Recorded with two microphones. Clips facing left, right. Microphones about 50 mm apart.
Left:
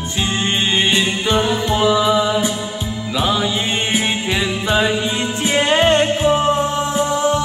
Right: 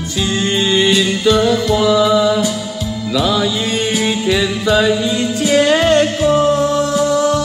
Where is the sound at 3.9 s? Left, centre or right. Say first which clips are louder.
Right 5 dB; left.